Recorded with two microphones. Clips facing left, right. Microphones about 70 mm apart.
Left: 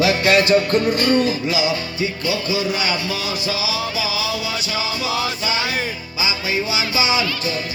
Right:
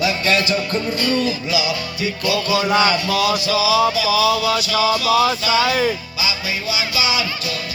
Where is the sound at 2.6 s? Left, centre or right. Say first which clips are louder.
Right 6 dB; right.